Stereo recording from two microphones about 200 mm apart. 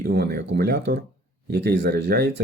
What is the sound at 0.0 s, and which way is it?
Speech, 50° right (ahead or behind).